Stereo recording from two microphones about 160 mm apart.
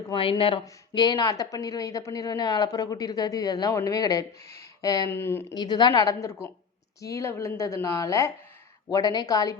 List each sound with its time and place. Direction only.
0.1 s a woman's voice: 35° left (ahead or behind); by 5.5 s 15° left (ahead or behind)
5.5 s a woman's voice: 25° left (ahead or behind)